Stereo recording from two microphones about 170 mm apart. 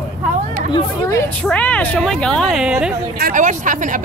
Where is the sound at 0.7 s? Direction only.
15° left (ahead or behind); by 2.9 s 5° right (ahead or behind).